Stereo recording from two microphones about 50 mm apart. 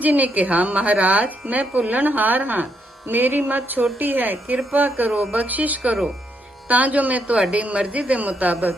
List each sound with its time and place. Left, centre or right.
0.0 s speech: right